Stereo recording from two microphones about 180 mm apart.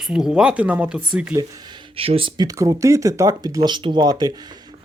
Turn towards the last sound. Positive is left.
turn(degrees=-20)  # may be behind; listen again after turning